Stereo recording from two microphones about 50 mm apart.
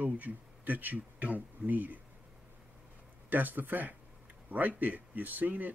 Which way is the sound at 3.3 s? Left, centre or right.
Right.